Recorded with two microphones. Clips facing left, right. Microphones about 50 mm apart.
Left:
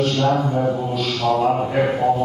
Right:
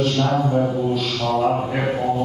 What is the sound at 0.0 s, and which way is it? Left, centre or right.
Mantra, centre.